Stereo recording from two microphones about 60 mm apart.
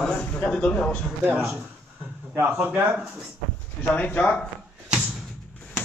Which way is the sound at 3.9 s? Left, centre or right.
Left.